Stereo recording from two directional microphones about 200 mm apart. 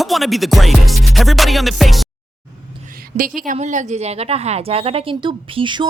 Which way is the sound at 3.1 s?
40° right (ahead or behind).